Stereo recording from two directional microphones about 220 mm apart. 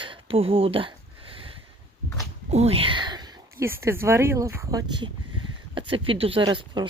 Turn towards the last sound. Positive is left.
turn(degrees=-20)  # may be behind; listen again after turning